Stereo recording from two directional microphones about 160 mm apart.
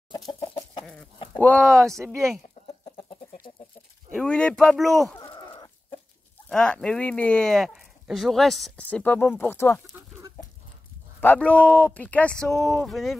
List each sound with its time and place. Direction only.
0.3 s chicken: 30° left (ahead or behind)
1.4 s speech: 10° left (ahead or behind)
2.8 s chicken: 35° left (ahead or behind)
4.1 s speech: 5° left (ahead or behind)
5.2 s chicken: 30° left (ahead or behind)
6.5 s speech: 5° left (ahead or behind)
11.1 s speech: 10° left (ahead or behind)